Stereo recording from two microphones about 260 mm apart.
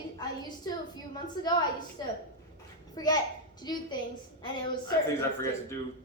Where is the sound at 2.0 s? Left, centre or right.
Centre.